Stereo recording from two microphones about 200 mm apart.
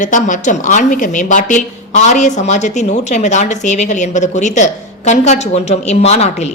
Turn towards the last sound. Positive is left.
turn(degrees=30)  # may be behind; listen again after turning